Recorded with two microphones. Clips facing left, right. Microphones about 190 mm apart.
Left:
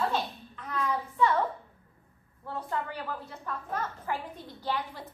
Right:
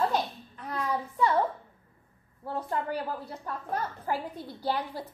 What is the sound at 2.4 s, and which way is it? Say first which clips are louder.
A woman's voice: right 3 dB; 35° right (ahead or behind).